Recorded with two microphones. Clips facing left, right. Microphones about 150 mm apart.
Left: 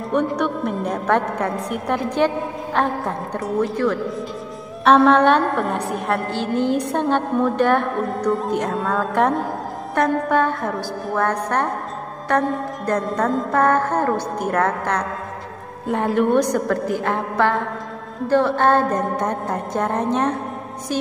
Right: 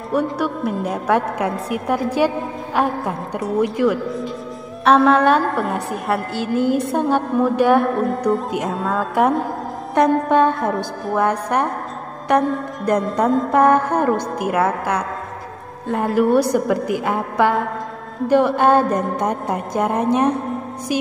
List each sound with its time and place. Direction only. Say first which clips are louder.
0.1 s a woman's voice: even; 5° right (ahead or behind)
3.6 s music: right 4 dB; 10° right (ahead or behind)
4.8 s a woman's voice: even; centre (ahead or behind)
9.9 s a woman's voice: right 4 dB; 20° right (ahead or behind)
11.1 s music: right 2 dB; 10° right (ahead or behind)
13.0 s a woman's voice: right 3 dB; centre (ahead or behind)
13.5 s music: right 2 dB; 15° right (ahead or behind)